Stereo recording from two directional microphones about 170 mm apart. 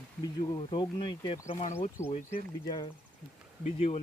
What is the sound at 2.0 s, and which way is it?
Speech, 15° left (ahead or behind).